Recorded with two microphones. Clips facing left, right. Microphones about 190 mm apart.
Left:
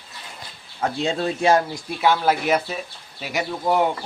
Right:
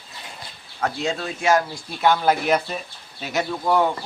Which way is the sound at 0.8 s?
30° left (ahead or behind).